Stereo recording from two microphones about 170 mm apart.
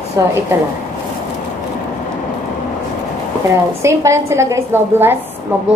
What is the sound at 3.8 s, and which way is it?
A woman's voice, 15° right (ahead or behind).